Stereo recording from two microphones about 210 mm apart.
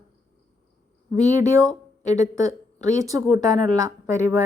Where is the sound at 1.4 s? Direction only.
15° right (ahead or behind).